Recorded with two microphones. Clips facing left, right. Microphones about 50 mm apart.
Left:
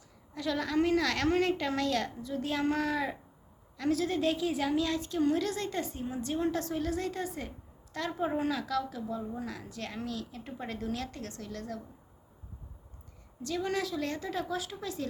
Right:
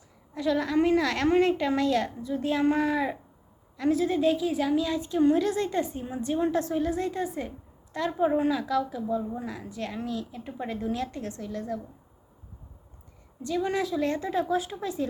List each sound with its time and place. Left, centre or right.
0.3 s a woman's voice: centre
10.8 s a woman's voice: centre
13.4 s a woman's voice: centre